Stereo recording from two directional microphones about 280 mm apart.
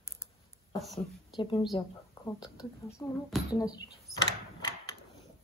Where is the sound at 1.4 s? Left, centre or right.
Centre.